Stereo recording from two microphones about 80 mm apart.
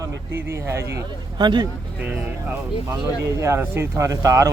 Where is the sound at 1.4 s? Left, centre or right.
Right.